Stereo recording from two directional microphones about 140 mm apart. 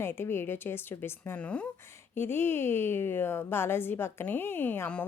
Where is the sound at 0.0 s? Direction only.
15° left (ahead or behind).